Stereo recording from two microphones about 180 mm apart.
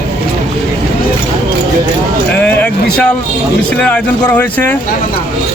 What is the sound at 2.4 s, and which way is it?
Speech, 10° left (ahead or behind).